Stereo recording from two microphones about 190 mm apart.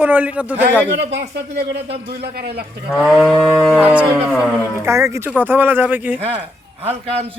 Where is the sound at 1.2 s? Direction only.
65° right (ahead or behind).